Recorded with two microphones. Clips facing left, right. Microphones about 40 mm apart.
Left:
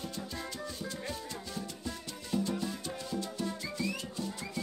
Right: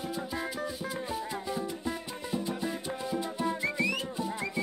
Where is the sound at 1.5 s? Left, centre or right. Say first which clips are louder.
Right 7 dB; right.